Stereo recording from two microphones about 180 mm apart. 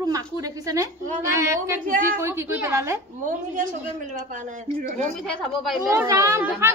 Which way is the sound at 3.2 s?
45° right (ahead or behind).